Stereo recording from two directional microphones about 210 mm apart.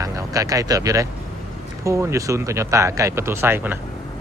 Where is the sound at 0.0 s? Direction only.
15° right (ahead or behind).